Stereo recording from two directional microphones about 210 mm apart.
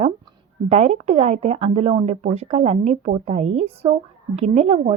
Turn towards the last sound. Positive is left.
turn(degrees=-30)  # may be behind; listen again after turning